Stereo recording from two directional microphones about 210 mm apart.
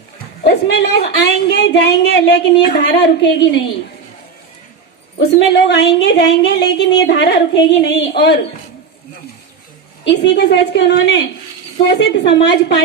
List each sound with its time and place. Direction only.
0.4 s speech: 55° left (ahead or behind)
5.5 s speech: 55° left (ahead or behind)
10.0 s speech: 55° left (ahead or behind)